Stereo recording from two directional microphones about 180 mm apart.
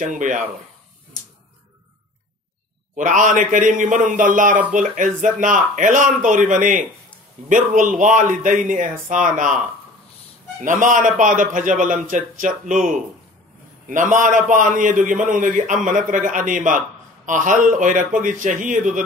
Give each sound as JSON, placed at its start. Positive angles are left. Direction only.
{"t": 0.0, "sound": "a man's voice", "side_deg": -45}
{"t": 3.0, "sound": "a man's voice", "side_deg": -45}
{"t": 10.6, "sound": "a man's voice", "side_deg": -45}